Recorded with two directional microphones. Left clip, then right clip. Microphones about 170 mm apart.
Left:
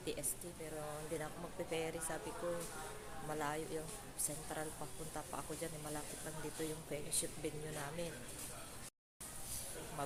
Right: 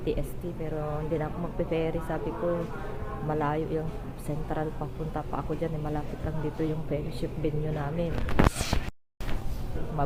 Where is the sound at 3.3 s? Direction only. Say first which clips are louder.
Right 13 dB; 25° left (ahead or behind).